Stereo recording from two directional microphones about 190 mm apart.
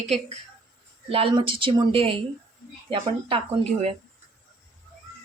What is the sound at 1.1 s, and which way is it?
A woman's voice, 30° right (ahead or behind).